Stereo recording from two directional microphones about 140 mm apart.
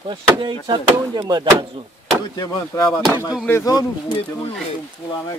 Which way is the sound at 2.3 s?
25° left (ahead or behind).